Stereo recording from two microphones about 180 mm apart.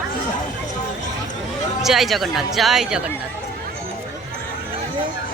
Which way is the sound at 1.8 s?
Centre (ahead or behind).